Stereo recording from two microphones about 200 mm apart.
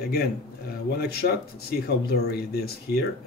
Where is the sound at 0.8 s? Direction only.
55° left (ahead or behind).